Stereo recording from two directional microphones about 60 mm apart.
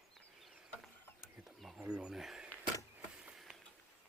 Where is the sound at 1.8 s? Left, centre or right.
Centre.